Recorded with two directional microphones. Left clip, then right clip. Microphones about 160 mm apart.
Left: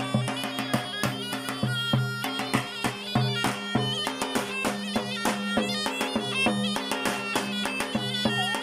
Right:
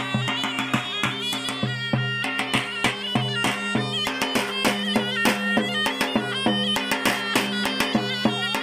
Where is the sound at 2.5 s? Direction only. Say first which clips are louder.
Right 5 dB; 5° right (ahead or behind).